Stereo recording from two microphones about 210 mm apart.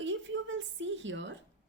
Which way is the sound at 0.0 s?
65° right (ahead or behind).